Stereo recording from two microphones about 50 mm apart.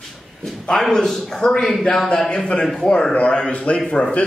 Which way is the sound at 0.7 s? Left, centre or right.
Centre.